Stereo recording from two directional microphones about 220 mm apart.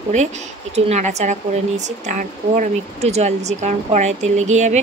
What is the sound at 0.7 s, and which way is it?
Speech, 30° right (ahead or behind).